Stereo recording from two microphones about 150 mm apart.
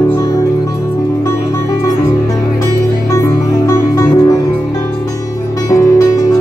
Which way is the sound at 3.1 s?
20° left (ahead or behind).